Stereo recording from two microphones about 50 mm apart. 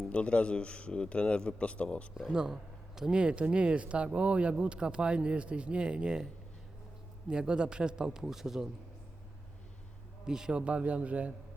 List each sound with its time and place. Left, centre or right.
0.1 s a man's voice: left
2.1 s a man's voice: centre
7.3 s a man's voice: centre
10.2 s a man's voice: centre
10.6 s speech: right